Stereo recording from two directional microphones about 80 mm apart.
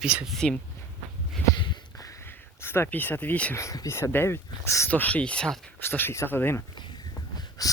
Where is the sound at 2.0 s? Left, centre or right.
Left.